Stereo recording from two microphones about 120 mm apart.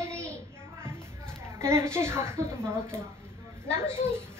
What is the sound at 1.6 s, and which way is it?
Speech, 20° right (ahead or behind).